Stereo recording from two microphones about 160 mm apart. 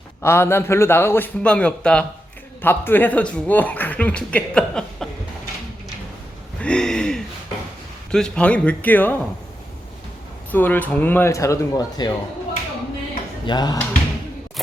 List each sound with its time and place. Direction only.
0.2 s speech: 15° left (ahead or behind)
6.6 s a sound: 5° left (ahead or behind)
8.1 s speech: 5° left (ahead or behind)
10.5 s speech: 10° left (ahead or behind)
13.4 s speech: 25° left (ahead or behind)